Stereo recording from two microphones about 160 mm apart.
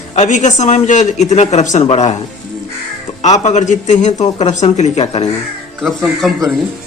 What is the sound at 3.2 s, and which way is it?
A man's voice, 45° left (ahead or behind).